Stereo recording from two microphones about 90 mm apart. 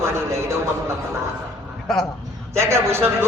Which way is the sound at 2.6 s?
30° right (ahead or behind).